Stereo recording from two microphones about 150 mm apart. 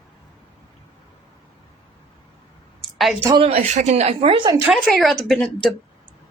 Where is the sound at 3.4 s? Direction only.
45° right (ahead or behind).